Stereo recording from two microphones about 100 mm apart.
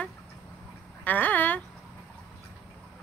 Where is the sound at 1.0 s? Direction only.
15° left (ahead or behind).